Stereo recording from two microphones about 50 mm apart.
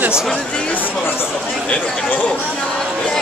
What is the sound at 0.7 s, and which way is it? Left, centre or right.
Speech, left.